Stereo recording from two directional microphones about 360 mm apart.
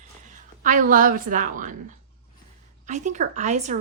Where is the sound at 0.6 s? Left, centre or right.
Right.